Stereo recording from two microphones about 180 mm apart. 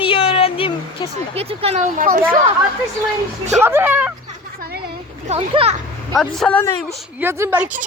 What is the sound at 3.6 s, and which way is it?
Speech, 10° right (ahead or behind).